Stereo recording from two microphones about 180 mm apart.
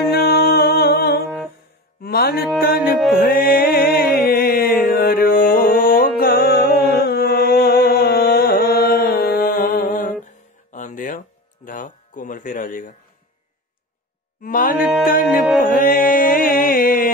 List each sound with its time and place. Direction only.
0.1 s music: 60° left (ahead or behind)
14.4 s music: 50° left (ahead or behind)
14.8 s music: 5° right (ahead or behind)
15.0 s music: 50° left (ahead or behind)